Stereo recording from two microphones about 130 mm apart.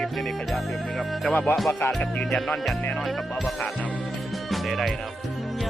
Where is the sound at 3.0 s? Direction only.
Centre (ahead or behind).